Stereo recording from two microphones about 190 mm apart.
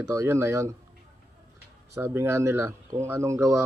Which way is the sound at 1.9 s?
15° right (ahead or behind).